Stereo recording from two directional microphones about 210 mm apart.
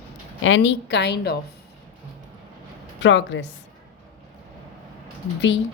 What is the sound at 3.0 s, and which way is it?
Speech, 60° left (ahead or behind).